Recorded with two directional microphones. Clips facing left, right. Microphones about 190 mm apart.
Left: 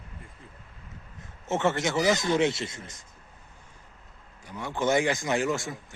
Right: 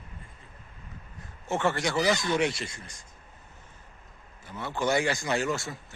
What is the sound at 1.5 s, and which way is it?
Speech, 20° left (ahead or behind).